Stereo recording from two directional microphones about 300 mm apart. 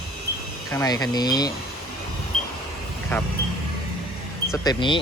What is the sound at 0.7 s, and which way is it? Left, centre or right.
Speech, centre.